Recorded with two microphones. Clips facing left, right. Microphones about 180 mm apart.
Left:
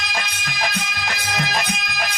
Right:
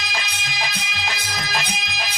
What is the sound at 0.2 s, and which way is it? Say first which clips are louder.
Music: left 5 dB; 55° left (ahead or behind).